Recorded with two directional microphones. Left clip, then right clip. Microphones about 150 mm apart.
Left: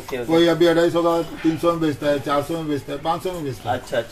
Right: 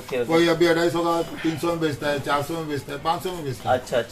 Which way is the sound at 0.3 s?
20° left (ahead or behind).